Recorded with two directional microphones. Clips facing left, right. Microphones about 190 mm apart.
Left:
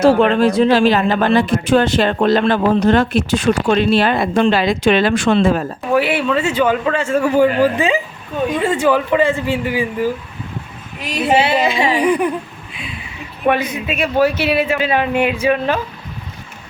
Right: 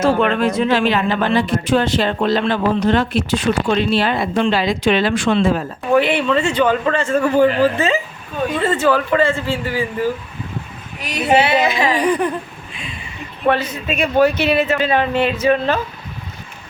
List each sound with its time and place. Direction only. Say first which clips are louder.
0.0 s speech: left 4 dB; 35° left (ahead or behind); by 5.6 s 50° left (ahead or behind)
5.9 s speech: right 1 dB; 5° left (ahead or behind)
11.3 s a sound: right 1 dB; 30° left (ahead or behind)
11.9 s speech: left 2 dB; 10° left (ahead or behind)
12.7 s a sound: left 2 dB; 5° left (ahead or behind)
13.4 s speech: left 1 dB; 15° left (ahead or behind)